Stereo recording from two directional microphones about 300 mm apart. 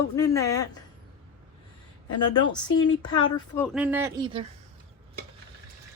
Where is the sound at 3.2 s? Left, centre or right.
Centre.